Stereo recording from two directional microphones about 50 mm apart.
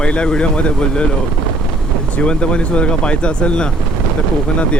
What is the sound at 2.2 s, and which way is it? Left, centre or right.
Speech, left.